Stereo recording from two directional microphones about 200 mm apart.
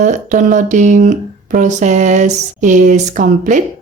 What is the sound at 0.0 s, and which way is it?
Speech, 40° right (ahead or behind).